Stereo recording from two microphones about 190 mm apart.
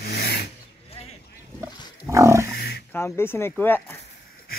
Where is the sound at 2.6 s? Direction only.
55° left (ahead or behind).